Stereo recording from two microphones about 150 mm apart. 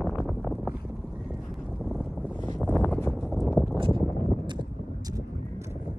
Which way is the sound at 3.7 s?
35° right (ahead or behind).